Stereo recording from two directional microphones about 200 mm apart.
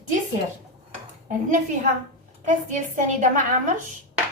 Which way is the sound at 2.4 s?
40° right (ahead or behind).